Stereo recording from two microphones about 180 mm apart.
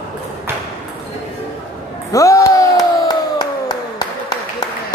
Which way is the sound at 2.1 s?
20° left (ahead or behind).